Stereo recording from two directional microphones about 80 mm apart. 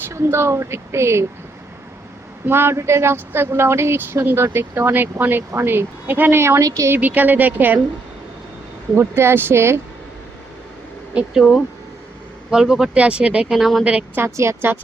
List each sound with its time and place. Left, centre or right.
0.1 s speech: right
2.5 s speech: right
6.6 s speech: right
6.9 s speech: right
9.0 s speech: right
11.1 s speech: centre
12.5 s speech: centre
13.6 s speech: centre
14.2 s speech: right